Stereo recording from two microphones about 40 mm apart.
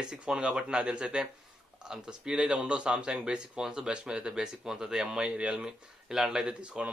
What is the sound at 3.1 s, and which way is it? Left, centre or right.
Speech, centre.